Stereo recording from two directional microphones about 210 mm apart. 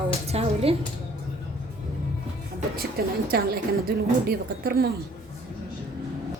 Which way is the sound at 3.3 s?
45° right (ahead or behind).